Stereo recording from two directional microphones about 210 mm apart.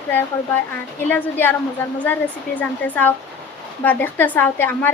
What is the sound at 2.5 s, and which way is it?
A woman's voice, 10° left (ahead or behind).